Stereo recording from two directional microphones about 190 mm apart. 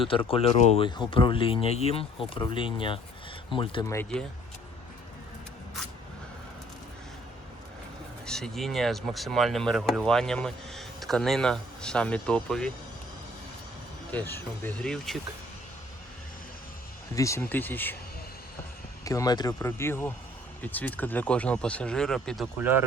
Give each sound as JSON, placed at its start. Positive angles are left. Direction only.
{"t": 0.0, "sound": "speech", "side_deg": 30}
{"t": 8.3, "sound": "speech", "side_deg": 0}
{"t": 14.1, "sound": "speech", "side_deg": 10}
{"t": 17.2, "sound": "speech", "side_deg": 15}
{"t": 19.0, "sound": "speech", "side_deg": 20}